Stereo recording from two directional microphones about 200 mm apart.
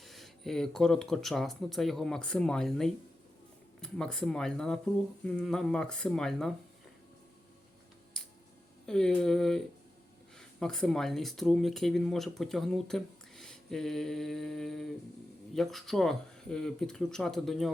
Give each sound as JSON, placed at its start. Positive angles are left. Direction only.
{"t": 0.0, "sound": "speech", "side_deg": 0}
{"t": 8.9, "sound": "speech", "side_deg": 5}